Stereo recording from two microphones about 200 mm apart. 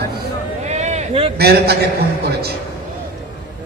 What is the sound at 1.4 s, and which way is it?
Speech, 55° right (ahead or behind).